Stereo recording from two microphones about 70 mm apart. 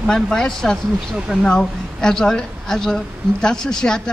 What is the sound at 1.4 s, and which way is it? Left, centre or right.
A woman's voice, centre.